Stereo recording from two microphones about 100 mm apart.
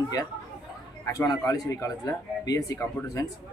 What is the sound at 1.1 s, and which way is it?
Speech, 35° left (ahead or behind).